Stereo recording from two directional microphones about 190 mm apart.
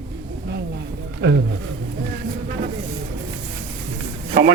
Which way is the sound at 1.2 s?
70° right (ahead or behind).